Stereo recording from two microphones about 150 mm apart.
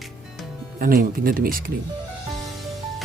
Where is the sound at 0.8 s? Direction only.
75° right (ahead or behind).